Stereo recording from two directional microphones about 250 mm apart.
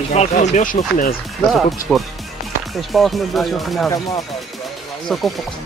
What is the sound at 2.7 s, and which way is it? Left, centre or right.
Speech, centre.